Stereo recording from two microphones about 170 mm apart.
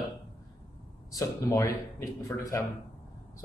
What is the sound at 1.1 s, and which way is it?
A man's voice, 20° left (ahead or behind).